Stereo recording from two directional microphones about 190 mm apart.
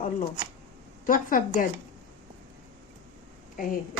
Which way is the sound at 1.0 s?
45° left (ahead or behind).